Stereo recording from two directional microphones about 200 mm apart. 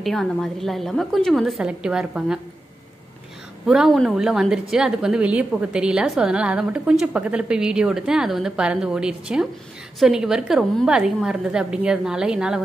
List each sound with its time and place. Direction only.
0.0 s a woman's voice: centre (ahead or behind)
3.6 s a woman's voice: 5° right (ahead or behind)